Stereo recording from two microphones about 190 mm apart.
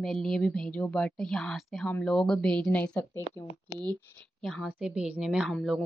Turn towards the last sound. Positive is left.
turn(degrees=0)  # may be behind; listen again after turning